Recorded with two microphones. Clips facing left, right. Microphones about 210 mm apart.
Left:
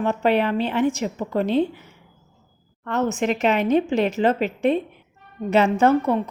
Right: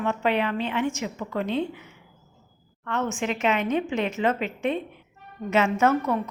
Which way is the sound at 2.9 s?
40° left (ahead or behind).